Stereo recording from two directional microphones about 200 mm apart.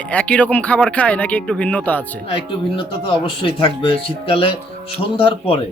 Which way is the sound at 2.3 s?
25° left (ahead or behind).